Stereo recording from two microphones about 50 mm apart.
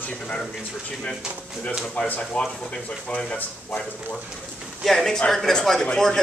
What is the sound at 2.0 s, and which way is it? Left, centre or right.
Speech, left.